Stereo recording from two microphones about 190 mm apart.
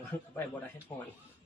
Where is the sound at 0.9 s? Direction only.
25° left (ahead or behind).